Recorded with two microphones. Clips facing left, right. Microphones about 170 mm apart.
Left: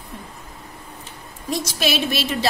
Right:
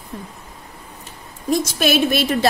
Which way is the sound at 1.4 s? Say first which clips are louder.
Right 5 dB; 50° right (ahead or behind).